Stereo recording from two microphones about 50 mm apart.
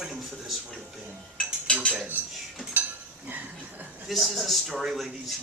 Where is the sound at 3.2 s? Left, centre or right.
Right.